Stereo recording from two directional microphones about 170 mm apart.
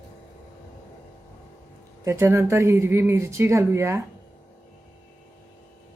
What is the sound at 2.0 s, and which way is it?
A woman's voice, 15° right (ahead or behind).